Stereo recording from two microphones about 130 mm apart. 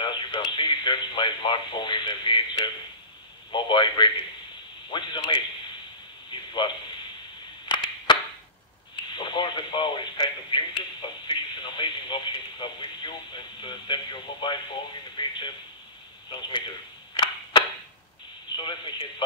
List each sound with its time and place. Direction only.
0.0 s speech: 35° left (ahead or behind)
6.3 s a sound: 35° left (ahead or behind)
9.1 s speech: 35° left (ahead or behind)
17.1 s cap gun: 40° left (ahead or behind)
18.6 s speech: 35° left (ahead or behind)